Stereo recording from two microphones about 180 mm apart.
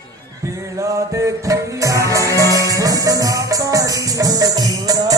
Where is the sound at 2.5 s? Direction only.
20° right (ahead or behind).